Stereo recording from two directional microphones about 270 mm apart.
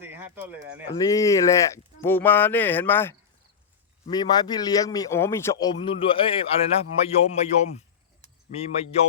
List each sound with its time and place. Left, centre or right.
0.0 s bird: centre
0.9 s a man's voice: centre
8.5 s speech: left